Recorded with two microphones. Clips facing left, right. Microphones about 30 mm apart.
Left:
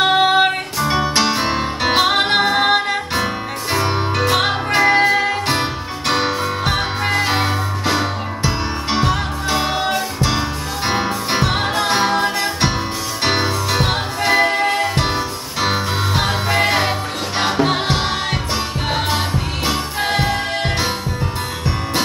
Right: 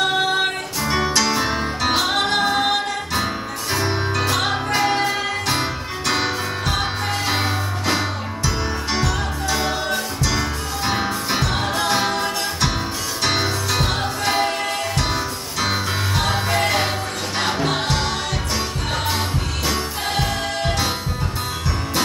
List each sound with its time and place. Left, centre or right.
0.0 s music: left
7.2 s music: left
8.9 s music: left
19.0 s music: left